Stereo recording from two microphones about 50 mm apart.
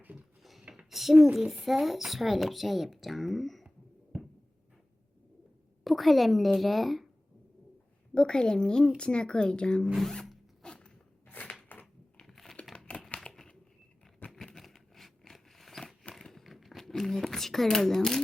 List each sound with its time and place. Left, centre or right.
0.9 s a sound: centre
1.2 s speech: centre
5.8 s speech: centre
8.1 s speech: centre
10.6 s zipper: centre
11.3 s a sound: left
12.1 s crumpling: centre
12.7 s crumpling: centre
13.3 s a sound: centre
16.1 s crumpling: centre